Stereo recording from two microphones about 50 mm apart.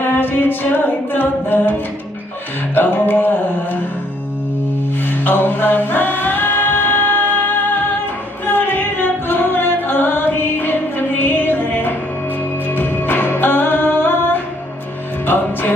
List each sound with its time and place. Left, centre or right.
0.0 s music: left
2.7 s music: left
5.2 s music: left